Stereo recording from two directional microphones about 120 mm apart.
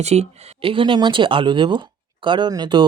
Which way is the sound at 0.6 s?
45° right (ahead or behind).